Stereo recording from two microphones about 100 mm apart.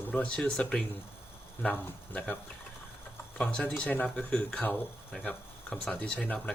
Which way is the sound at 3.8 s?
15° left (ahead or behind).